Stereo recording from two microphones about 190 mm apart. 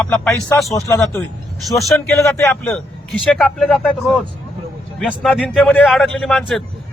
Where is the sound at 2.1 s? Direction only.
15° left (ahead or behind).